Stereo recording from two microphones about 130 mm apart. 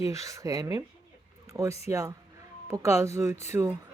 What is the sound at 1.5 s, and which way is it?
Speech, 25° right (ahead or behind).